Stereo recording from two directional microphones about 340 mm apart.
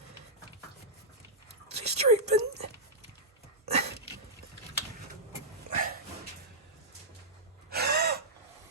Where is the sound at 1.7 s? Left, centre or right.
Centre.